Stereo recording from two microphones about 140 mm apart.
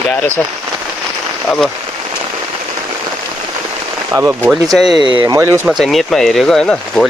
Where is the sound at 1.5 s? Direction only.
5° left (ahead or behind).